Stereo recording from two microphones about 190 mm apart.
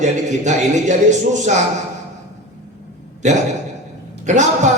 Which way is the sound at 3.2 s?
40° right (ahead or behind).